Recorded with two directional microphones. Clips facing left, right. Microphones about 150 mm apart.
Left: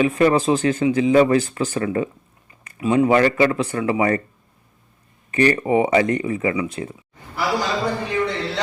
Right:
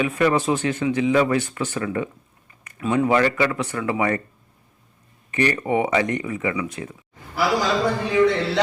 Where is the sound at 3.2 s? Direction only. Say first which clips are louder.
Left 4 dB; 30° left (ahead or behind).